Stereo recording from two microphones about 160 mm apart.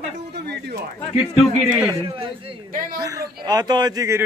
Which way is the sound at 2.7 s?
60° right (ahead or behind).